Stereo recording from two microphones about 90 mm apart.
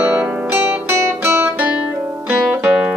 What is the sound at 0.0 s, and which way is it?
Music, 15° right (ahead or behind).